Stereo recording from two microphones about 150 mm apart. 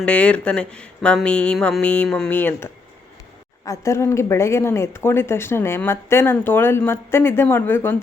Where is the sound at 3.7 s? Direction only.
20° left (ahead or behind).